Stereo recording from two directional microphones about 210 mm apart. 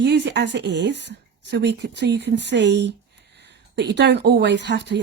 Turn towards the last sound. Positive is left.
turn(degrees=-55)  # may be behind; listen again after turning